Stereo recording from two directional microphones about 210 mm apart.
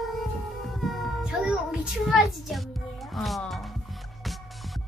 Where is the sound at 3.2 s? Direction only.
Centre (ahead or behind).